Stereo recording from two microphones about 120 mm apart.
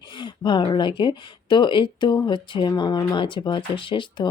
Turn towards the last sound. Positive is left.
turn(degrees=40)  # may be behind; listen again after turning